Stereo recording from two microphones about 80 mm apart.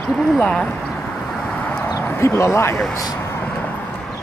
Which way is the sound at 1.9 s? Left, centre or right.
Left.